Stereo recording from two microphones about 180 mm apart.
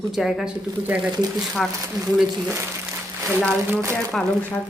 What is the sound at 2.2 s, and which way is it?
Speech, 10° right (ahead or behind).